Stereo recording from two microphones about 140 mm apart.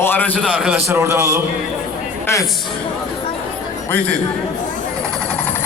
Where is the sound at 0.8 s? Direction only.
20° right (ahead or behind).